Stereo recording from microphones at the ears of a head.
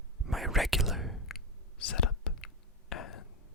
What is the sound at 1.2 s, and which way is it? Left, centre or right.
Whispering, left.